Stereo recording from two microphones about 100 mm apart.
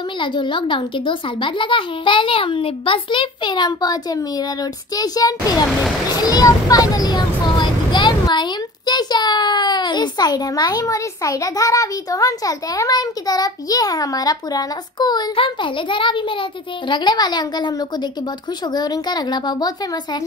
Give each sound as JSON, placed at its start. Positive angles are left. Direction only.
{"t": 0.2, "sound": "a child's voice", "side_deg": 55}
{"t": 15.3, "sound": "a child's voice", "side_deg": 55}